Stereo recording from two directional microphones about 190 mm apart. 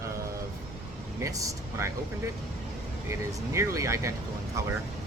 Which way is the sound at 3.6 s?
15° right (ahead or behind).